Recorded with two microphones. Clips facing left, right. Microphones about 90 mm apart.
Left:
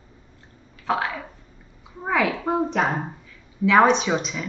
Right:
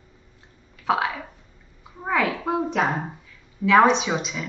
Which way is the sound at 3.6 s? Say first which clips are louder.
Even; centre (ahead or behind).